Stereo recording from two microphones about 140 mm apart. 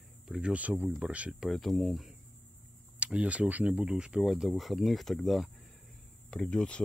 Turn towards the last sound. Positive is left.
turn(degrees=10)  # may be behind; listen again after turning